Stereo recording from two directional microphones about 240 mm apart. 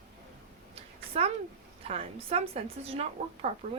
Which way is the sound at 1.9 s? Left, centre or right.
Right.